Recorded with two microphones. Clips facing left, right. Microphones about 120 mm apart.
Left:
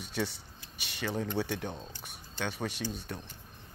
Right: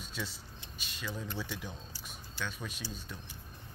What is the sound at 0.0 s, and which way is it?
Speech, 65° left (ahead or behind).